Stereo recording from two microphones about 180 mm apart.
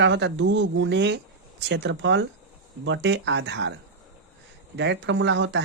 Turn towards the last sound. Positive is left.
turn(degrees=-90)